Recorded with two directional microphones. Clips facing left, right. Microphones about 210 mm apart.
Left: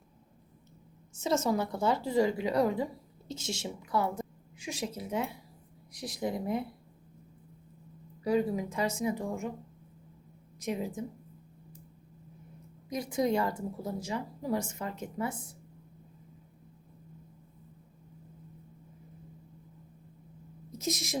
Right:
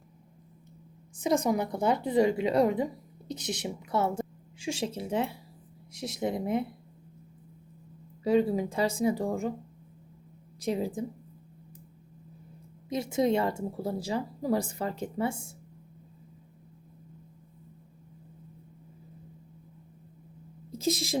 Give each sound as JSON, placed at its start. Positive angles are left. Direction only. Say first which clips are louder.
{"t": 1.1, "sound": "a woman's voice", "louder": "right 2 dB", "side_deg": -15}
{"t": 8.2, "sound": "speech", "louder": "right 4 dB", "side_deg": -25}
{"t": 10.6, "sound": "speech", "louder": "right 4 dB", "side_deg": -30}
{"t": 12.9, "sound": "a woman's voice", "louder": "right 3 dB", "side_deg": -25}
{"t": 20.7, "sound": "speech", "louder": "right 5 dB", "side_deg": -30}